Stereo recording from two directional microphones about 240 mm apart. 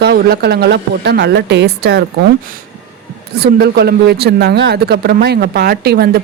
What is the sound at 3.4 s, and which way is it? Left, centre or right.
Speech, right.